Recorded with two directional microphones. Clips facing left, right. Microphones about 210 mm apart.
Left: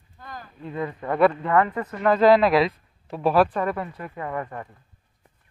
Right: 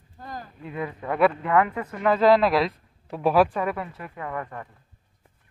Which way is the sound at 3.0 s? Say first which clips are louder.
Even; 10° right (ahead or behind).